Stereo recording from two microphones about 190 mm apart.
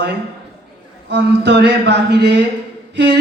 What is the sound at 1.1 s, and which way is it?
Mantra, 65° right (ahead or behind).